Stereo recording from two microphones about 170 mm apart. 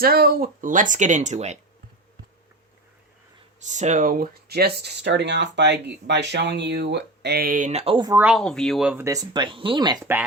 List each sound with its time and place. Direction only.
0.0 s speech: 60° right (ahead or behind); by 1.5 s 40° right (ahead or behind)
3.7 s speech: 45° right (ahead or behind)
8.1 s speech: 10° right (ahead or behind)
8.4 s speech: centre (ahead or behind)
9.0 s speech: 20° right (ahead or behind)